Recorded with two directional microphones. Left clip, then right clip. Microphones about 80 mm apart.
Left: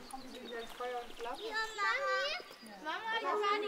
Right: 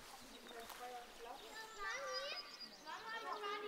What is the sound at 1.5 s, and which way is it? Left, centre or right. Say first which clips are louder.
Children playing: left 13 dB; left.